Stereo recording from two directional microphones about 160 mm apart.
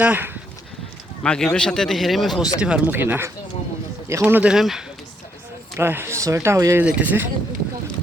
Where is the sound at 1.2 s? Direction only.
5° left (ahead or behind).